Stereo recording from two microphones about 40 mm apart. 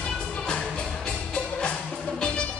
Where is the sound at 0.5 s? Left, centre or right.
Left.